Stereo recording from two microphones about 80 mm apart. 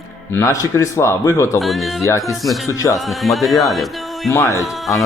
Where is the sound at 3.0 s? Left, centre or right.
Centre.